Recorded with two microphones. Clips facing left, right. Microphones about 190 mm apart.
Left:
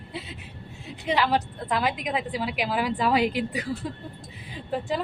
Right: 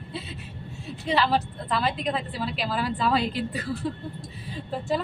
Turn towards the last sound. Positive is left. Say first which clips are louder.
# even
turn(degrees=15)  # may be behind; listen again after turning